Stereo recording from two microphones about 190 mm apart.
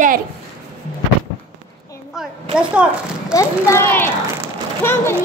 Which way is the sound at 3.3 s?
15° left (ahead or behind).